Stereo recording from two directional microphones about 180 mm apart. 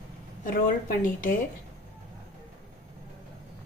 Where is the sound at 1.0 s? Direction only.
50° left (ahead or behind).